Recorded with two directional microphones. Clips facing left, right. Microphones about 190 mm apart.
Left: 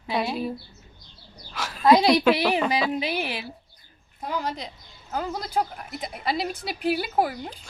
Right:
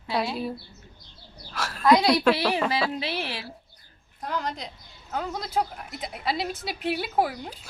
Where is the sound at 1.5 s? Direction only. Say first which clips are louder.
Right 1 dB; centre (ahead or behind).